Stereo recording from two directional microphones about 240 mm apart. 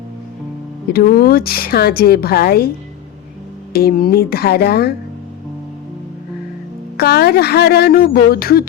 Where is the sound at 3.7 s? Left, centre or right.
Left.